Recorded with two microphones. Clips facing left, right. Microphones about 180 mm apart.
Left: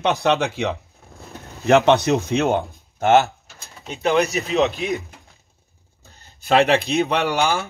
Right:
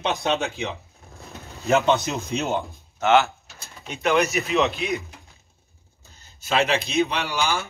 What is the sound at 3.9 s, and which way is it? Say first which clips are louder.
Speech: left 2 dB; 35° left (ahead or behind).